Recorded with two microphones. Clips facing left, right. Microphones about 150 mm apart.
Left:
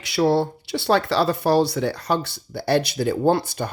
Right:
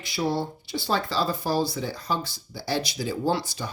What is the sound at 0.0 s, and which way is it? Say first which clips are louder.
Speech: left 8 dB; 70° left (ahead or behind).